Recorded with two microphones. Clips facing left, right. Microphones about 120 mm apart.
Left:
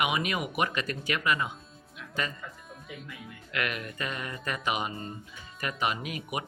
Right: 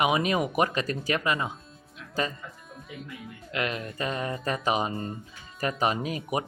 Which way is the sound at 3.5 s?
30° right (ahead or behind).